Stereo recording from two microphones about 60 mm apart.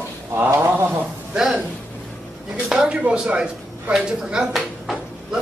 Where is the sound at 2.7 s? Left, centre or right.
Centre.